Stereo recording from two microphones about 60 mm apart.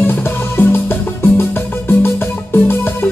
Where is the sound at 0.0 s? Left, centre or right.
Left.